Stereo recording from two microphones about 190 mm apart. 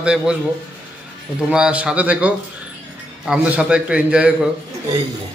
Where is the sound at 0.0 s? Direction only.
5° right (ahead or behind).